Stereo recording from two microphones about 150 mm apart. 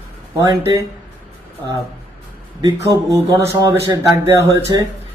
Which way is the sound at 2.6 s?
20° right (ahead or behind).